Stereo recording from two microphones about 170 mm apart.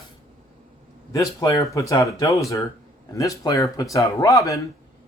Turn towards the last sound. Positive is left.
turn(degrees=20)  # may be behind; listen again after turning